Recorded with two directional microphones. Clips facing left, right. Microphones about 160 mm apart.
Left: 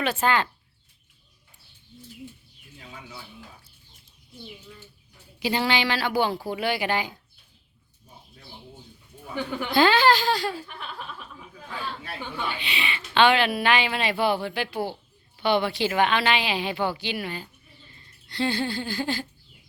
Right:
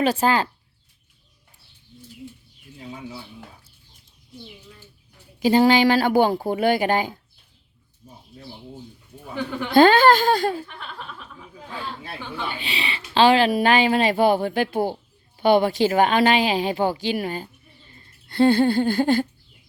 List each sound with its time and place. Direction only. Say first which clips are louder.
0.0 s a woman's voice: right 4 dB; 40° right (ahead or behind)
2.7 s speech: right 8 dB; 25° right (ahead or behind)
5.4 s speech: right 9 dB; 45° right (ahead or behind)
9.7 s speech: right 6 dB; 50° right (ahead or behind)
10.8 s speech: even; 5° left (ahead or behind)
12.5 s a woman's voice: right 2 dB; 40° right (ahead or behind)
18.3 s speech: right 10 dB; 50° right (ahead or behind)